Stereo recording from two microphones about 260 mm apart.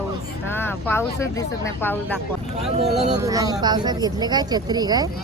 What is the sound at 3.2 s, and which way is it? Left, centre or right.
Speech, centre.